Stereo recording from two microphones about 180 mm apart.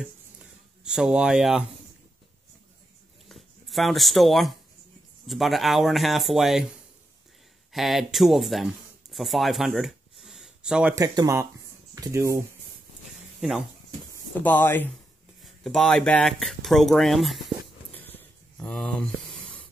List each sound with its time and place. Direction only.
0.8 s speech: 5° right (ahead or behind)
3.3 s speech: centre (ahead or behind)
7.7 s speech: centre (ahead or behind)
11.0 s speech: 15° right (ahead or behind)
13.4 s speech: centre (ahead or behind)
14.1 s speech: 10° left (ahead or behind)
17.9 s a sound: 10° left (ahead or behind)